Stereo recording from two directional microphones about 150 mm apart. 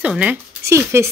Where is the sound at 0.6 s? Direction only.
20° right (ahead or behind).